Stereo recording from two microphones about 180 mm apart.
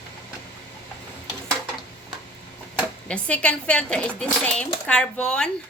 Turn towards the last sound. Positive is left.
turn(degrees=5)  # may be behind; listen again after turning